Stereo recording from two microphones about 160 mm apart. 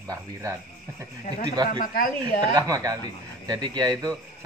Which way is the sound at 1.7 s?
60° left (ahead or behind).